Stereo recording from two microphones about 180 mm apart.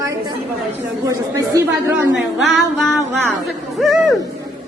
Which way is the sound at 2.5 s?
Centre (ahead or behind).